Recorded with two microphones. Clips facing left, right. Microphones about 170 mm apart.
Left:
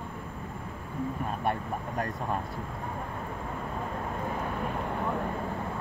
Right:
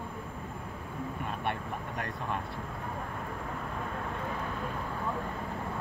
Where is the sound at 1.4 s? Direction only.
40° left (ahead or behind).